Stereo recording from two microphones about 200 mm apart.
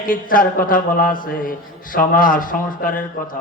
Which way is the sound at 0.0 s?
45° left (ahead or behind).